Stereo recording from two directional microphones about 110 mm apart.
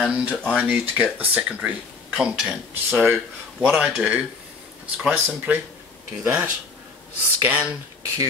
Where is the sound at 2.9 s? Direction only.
20° right (ahead or behind).